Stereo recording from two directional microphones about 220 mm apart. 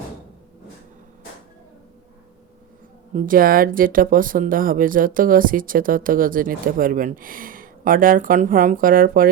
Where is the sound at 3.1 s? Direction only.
40° right (ahead or behind).